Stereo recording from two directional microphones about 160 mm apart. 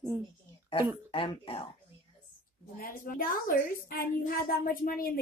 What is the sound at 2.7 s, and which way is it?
A woman's voice, 60° left (ahead or behind).